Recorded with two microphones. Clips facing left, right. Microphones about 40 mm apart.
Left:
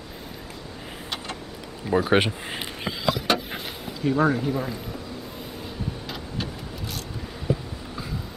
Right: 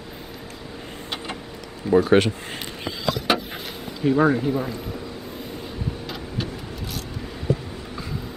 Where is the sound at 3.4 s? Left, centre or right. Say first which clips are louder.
Right 1 dB; centre.